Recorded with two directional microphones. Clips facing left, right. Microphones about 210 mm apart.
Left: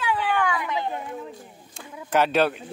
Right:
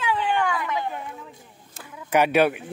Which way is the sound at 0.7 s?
20° left (ahead or behind).